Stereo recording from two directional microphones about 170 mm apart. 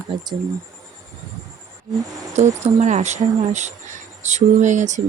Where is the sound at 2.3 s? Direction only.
45° right (ahead or behind).